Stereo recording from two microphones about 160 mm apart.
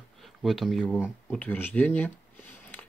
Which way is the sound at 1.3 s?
10° left (ahead or behind).